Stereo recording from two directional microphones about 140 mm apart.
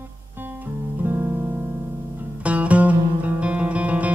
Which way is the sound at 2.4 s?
10° right (ahead or behind).